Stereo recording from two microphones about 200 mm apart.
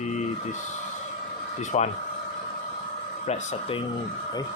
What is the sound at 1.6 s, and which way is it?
Speech, 35° left (ahead or behind).